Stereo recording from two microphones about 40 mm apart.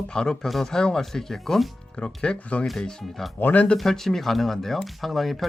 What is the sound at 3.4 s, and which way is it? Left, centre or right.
Speech, left.